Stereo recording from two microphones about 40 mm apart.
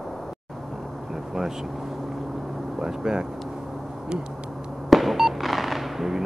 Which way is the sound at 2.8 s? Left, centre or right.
Centre.